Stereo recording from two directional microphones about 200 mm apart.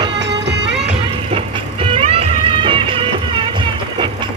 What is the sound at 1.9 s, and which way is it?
Music, 30° right (ahead or behind).